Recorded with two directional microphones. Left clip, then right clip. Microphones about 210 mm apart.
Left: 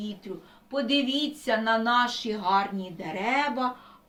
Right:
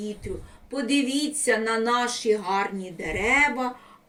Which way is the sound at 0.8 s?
15° left (ahead or behind).